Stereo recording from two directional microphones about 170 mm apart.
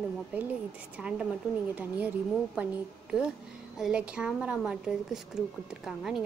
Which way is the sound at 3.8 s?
5° right (ahead or behind).